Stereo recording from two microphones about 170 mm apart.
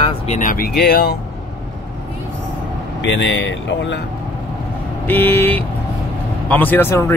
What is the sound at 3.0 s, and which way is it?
Speech, 90° left.